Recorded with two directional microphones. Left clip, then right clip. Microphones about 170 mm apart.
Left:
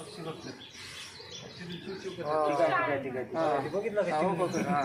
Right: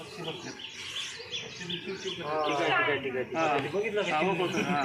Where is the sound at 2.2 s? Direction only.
45° left (ahead or behind).